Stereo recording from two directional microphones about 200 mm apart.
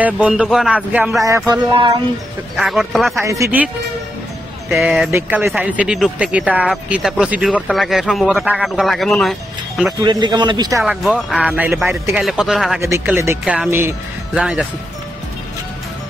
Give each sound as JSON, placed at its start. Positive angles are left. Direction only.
{"t": 0.0, "sound": "speech", "side_deg": -5}
{"t": 1.5, "sound": "a man's voice", "side_deg": -25}
{"t": 2.5, "sound": "speech", "side_deg": 0}
{"t": 3.2, "sound": "speech", "side_deg": -15}
{"t": 4.6, "sound": "speech", "side_deg": 0}
{"t": 5.1, "sound": "speech", "side_deg": -10}
{"t": 10.0, "sound": "a man's voice", "side_deg": -20}
{"t": 10.8, "sound": "speech", "side_deg": 0}